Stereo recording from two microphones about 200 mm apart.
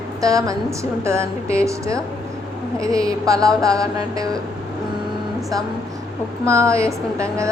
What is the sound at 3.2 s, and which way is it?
A woman's voice, 15° right (ahead or behind).